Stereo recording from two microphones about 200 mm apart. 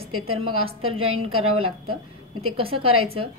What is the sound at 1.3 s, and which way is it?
Speech, 90° right.